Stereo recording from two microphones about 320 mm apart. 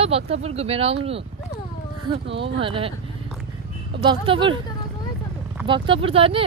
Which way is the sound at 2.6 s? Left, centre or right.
Centre.